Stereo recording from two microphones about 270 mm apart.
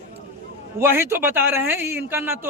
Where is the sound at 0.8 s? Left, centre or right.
Centre.